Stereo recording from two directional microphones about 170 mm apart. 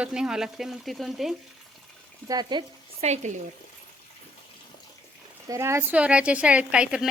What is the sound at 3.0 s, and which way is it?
Speech, 40° right (ahead or behind).